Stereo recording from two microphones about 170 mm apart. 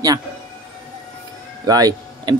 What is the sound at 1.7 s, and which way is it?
Speech, 20° right (ahead or behind).